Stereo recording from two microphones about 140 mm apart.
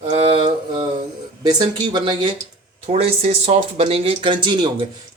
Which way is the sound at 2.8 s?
50° right (ahead or behind).